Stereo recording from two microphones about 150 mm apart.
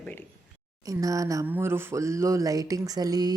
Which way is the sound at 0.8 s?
20° right (ahead or behind).